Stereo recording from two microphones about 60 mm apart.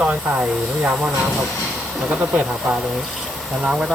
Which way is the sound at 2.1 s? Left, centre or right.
Right.